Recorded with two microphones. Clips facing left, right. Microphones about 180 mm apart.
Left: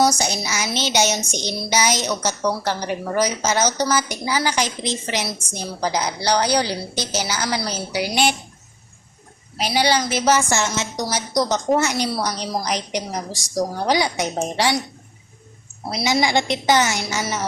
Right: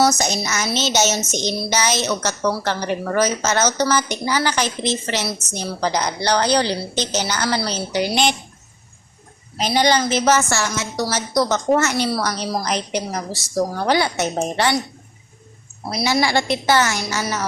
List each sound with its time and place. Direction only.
0.0 s a woman's voice: 10° left (ahead or behind)
9.6 s a woman's voice: 10° left (ahead or behind)
16.0 s a woman's voice: 15° left (ahead or behind)